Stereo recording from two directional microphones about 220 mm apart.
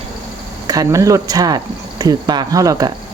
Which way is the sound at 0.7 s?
15° right (ahead or behind).